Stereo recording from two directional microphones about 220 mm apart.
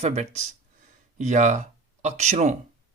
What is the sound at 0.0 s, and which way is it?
Speech, 30° right (ahead or behind).